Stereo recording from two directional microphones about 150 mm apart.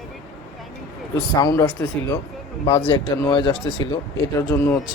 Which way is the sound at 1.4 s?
25° left (ahead or behind).